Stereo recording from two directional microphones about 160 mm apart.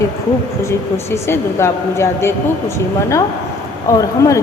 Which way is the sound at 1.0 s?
15° left (ahead or behind).